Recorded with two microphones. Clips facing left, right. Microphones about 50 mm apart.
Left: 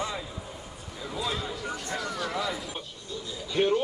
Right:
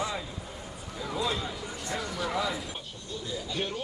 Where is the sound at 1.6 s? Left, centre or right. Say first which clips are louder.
Left 3 dB; left.